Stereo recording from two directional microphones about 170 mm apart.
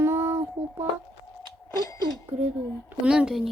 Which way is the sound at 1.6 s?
20° left (ahead or behind).